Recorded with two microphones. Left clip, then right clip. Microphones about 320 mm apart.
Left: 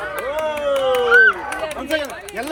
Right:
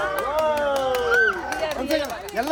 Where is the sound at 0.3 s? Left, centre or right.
Centre.